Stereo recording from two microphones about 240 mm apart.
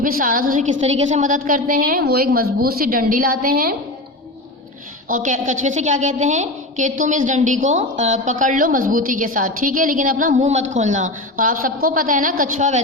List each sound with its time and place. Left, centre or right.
0.0 s a woman's voice: right
5.0 s a woman's voice: right